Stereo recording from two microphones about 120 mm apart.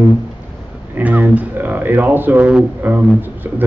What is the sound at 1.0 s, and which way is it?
A man's voice, 15° right (ahead or behind).